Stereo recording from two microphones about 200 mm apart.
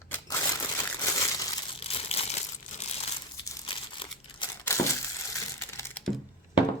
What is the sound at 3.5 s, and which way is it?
Crumpling, 20° left (ahead or behind).